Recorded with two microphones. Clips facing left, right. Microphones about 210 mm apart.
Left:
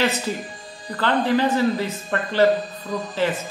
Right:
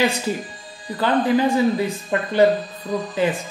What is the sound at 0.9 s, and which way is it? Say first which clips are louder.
A man's voice: right 2 dB; 15° right (ahead or behind).